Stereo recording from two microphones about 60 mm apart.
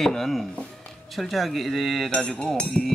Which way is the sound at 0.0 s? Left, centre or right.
Centre.